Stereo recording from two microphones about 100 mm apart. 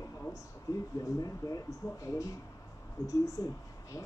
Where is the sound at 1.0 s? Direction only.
35° left (ahead or behind).